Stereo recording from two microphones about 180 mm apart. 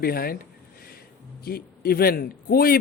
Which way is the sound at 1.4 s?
55° left (ahead or behind).